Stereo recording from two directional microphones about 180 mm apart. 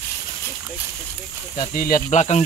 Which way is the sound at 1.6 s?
50° left (ahead or behind).